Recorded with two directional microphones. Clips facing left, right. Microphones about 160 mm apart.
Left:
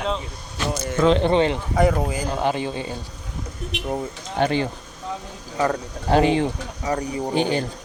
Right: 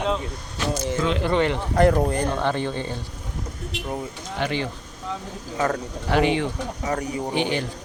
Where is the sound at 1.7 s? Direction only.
5° left (ahead or behind).